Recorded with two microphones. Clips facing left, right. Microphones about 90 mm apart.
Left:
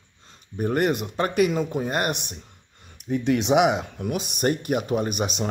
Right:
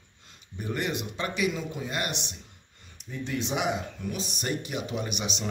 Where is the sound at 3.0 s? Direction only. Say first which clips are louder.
Left 10 dB; 70° left (ahead or behind).